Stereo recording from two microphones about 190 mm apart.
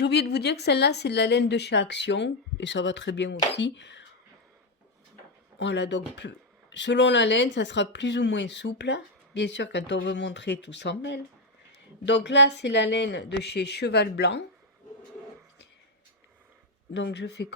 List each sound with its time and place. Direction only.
0.0 s speech: 60° left (ahead or behind)
5.5 s speech: 70° left (ahead or behind)
16.9 s speech: 65° left (ahead or behind)